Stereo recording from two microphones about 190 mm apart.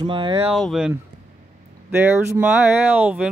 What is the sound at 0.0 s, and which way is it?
Speech, 25° right (ahead or behind).